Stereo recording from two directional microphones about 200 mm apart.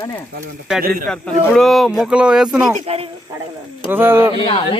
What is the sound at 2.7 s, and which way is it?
Speech, 30° right (ahead or behind).